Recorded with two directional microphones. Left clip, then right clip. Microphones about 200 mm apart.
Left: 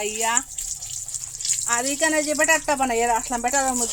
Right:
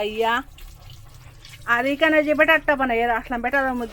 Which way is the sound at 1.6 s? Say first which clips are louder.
Right 5 dB; 5° left (ahead or behind).